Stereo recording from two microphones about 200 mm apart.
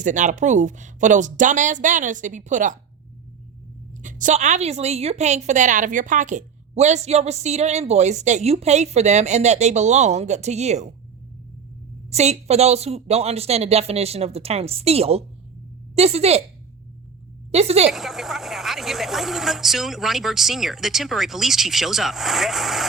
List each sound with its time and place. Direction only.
0.0 s a woman's voice: 40° right (ahead or behind)
4.0 s a woman's voice: 40° right (ahead or behind)
12.1 s a woman's voice: 35° right (ahead or behind)
17.5 s a woman's voice: 30° right (ahead or behind)
17.9 s speech: centre (ahead or behind)